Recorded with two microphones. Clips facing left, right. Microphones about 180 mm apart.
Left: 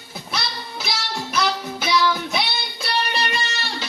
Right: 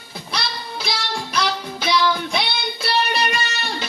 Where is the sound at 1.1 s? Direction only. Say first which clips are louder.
Left 1 dB; 5° left (ahead or behind).